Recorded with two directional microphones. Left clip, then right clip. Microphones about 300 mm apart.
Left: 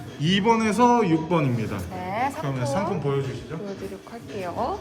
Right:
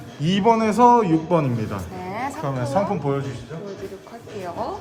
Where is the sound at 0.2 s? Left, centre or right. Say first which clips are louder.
Right 3 dB; centre.